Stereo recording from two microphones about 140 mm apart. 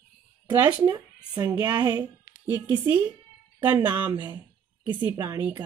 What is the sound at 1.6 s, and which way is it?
Speech, 30° right (ahead or behind).